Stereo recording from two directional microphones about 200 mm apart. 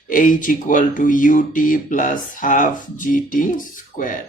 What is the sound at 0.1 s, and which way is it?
Speech, 40° left (ahead or behind).